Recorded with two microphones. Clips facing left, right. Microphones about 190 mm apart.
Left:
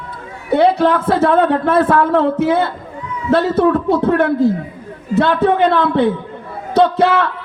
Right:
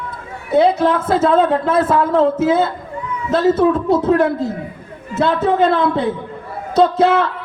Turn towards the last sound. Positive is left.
turn(degrees=65)  # may be behind; listen again after turning